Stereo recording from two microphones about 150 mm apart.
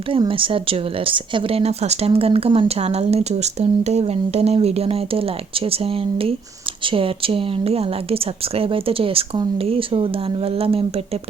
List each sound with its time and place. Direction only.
0.1 s speech: 35° right (ahead or behind)